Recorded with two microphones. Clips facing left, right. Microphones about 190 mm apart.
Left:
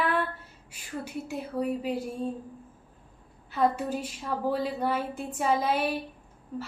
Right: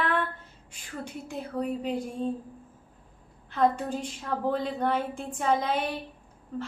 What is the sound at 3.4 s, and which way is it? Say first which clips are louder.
A woman's voice: right 1 dB; 5° left (ahead or behind).